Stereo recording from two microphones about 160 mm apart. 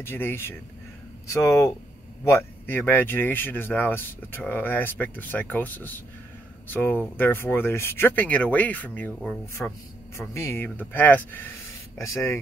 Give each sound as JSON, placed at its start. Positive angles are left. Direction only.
{"t": 0.0, "sound": "a man's voice", "side_deg": 15}
{"t": 10.1, "sound": "speech", "side_deg": 15}